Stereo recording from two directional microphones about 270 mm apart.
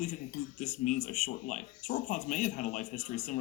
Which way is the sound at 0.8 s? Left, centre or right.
Left.